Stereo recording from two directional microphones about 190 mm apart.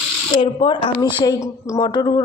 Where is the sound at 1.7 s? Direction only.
25° left (ahead or behind).